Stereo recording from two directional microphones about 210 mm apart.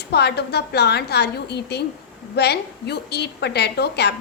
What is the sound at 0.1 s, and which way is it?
A woman's voice, 50° left (ahead or behind).